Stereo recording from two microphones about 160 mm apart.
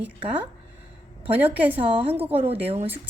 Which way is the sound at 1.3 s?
10° right (ahead or behind).